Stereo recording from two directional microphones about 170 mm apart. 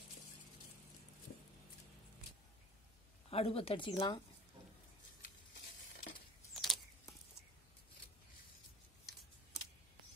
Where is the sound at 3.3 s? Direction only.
35° left (ahead or behind).